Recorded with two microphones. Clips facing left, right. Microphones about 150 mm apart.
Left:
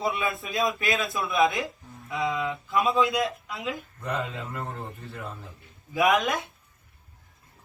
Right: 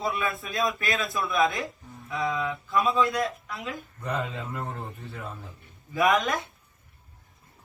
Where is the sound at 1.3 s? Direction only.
25° left (ahead or behind).